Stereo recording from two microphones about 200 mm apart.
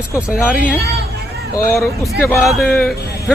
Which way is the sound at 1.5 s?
15° left (ahead or behind).